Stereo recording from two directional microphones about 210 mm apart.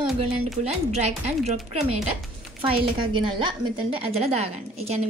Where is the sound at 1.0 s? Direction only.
30° right (ahead or behind).